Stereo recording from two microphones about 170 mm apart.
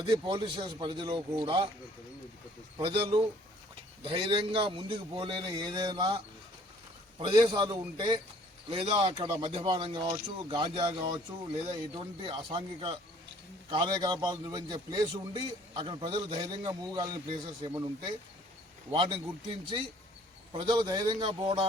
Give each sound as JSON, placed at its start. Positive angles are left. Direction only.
{"t": 0.1, "sound": "a man's voice", "side_deg": -30}
{"t": 2.7, "sound": "a man's voice", "side_deg": -30}
{"t": 20.5, "sound": "a man's voice", "side_deg": -30}